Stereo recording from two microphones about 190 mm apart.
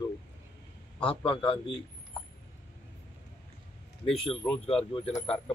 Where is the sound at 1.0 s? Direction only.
25° left (ahead or behind).